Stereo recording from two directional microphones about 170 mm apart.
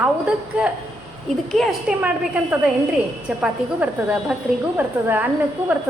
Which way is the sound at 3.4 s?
10° right (ahead or behind).